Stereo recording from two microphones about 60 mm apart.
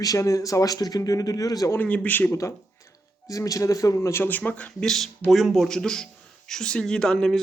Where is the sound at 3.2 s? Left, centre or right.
Left.